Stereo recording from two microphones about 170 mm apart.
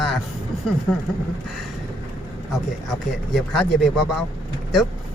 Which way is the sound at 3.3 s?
Centre (ahead or behind).